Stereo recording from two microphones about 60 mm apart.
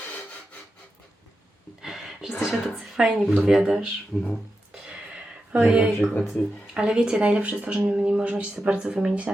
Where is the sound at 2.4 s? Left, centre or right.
Centre.